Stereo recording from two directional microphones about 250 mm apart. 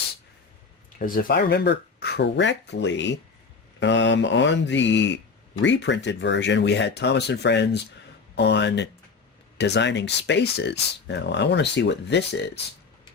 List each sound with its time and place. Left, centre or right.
0.9 s speech: left